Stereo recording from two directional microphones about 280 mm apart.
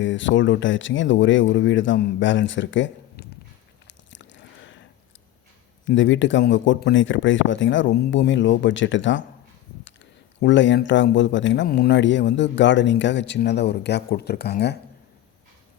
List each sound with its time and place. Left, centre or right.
0.0 s speech: left
3.8 s biting: left
5.8 s speech: left